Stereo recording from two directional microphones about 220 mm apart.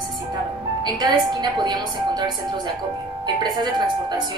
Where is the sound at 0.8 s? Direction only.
20° right (ahead or behind).